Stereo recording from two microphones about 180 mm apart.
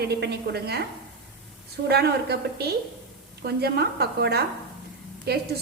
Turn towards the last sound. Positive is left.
turn(degrees=-60)  # may be behind; listen again after turning